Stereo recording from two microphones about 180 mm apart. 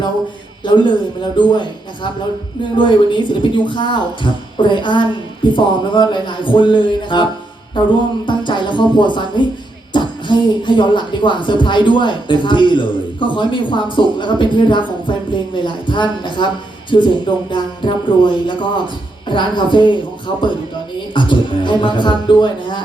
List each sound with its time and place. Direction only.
0.6 s a man's voice: 25° left (ahead or behind)
2.7 s speech: 25° left (ahead or behind)